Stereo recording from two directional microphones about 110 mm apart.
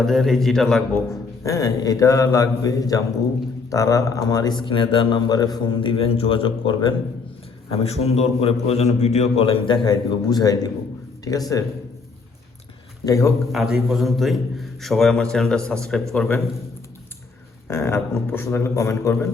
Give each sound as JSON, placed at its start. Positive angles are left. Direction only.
{"t": 0.0, "sound": "a man's voice", "side_deg": 0}
{"t": 1.5, "sound": "speech", "side_deg": 35}
{"t": 5.8, "sound": "a man's voice", "side_deg": 55}
{"t": 7.7, "sound": "a man's voice", "side_deg": 70}
{"t": 13.1, "sound": "a man's voice", "side_deg": 30}
{"t": 13.5, "sound": "a man's voice", "side_deg": -5}
{"t": 17.7, "sound": "a man's voice", "side_deg": 25}